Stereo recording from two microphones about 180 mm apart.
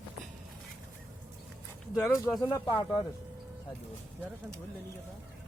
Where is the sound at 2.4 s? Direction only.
20° left (ahead or behind).